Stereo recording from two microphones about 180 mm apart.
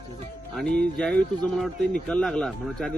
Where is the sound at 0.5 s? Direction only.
5° left (ahead or behind).